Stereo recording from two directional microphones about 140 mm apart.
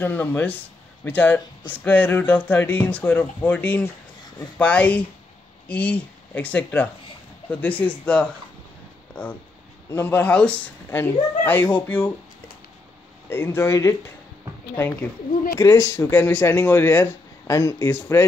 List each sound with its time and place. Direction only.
0.0 s speech: 10° left (ahead or behind)
13.3 s speech: 15° left (ahead or behind)